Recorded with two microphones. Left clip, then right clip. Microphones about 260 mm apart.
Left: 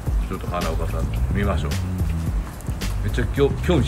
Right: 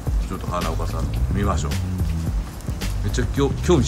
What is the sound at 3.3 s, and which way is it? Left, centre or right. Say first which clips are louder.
Speech: even; centre.